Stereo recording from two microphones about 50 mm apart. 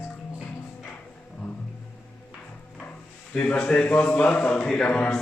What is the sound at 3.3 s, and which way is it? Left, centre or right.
A man's voice, left.